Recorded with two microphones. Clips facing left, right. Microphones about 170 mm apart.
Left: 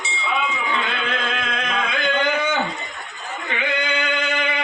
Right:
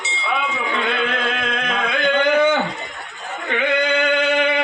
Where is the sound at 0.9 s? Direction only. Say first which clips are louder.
Right 4 dB; 55° right (ahead or behind).